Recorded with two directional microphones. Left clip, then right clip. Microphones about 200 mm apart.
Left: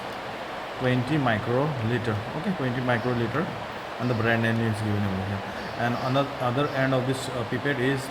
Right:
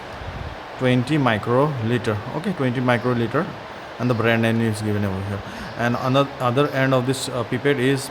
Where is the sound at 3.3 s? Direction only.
55° right (ahead or behind).